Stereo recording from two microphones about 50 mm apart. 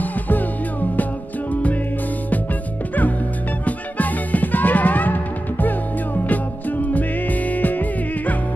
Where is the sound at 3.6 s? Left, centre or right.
Left.